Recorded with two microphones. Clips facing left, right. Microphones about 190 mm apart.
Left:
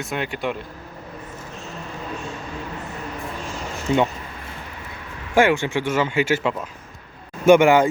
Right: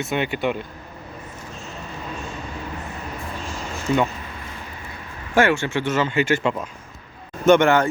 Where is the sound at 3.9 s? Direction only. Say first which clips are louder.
Left 1 dB; 20° left (ahead or behind).